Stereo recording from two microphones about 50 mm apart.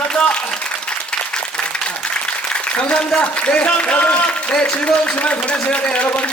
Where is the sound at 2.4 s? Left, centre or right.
Left.